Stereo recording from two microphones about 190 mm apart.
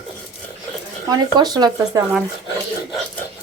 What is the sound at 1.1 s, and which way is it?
Speech, 20° right (ahead or behind).